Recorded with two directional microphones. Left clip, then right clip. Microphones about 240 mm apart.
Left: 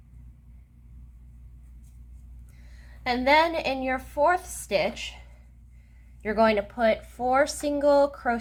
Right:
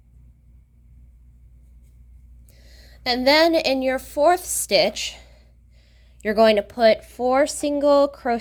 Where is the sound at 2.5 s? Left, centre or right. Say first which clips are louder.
Right 6 dB; right.